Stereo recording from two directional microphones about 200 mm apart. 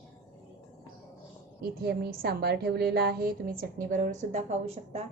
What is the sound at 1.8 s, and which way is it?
A woman's voice, 50° right (ahead or behind).